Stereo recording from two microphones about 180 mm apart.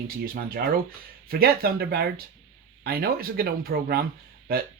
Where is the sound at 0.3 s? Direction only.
55° right (ahead or behind).